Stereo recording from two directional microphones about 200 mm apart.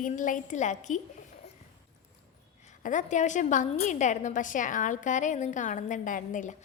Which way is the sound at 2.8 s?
40° left (ahead or behind).